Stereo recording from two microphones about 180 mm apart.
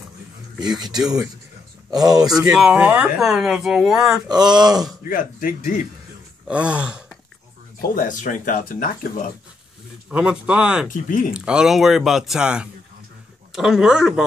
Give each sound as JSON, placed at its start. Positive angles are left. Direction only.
{"t": 0.6, "sound": "speech", "side_deg": -25}
{"t": 2.5, "sound": "speech", "side_deg": -5}
{"t": 4.3, "sound": "speech", "side_deg": -25}
{"t": 5.1, "sound": "speech", "side_deg": 50}
{"t": 6.4, "sound": "gasp", "side_deg": -5}
{"t": 7.8, "sound": "speech", "side_deg": 50}
{"t": 10.0, "sound": "speech", "side_deg": -5}
{"t": 10.9, "sound": "speech", "side_deg": 45}
{"t": 11.3, "sound": "speech", "side_deg": -5}